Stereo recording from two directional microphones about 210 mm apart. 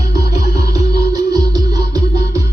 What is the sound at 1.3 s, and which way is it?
Music, 15° right (ahead or behind).